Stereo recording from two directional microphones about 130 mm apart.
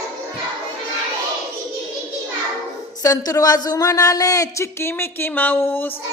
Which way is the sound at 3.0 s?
25° left (ahead or behind).